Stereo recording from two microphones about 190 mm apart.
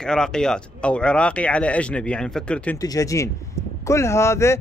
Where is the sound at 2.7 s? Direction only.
15° left (ahead or behind).